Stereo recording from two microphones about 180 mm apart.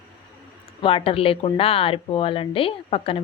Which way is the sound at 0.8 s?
30° left (ahead or behind).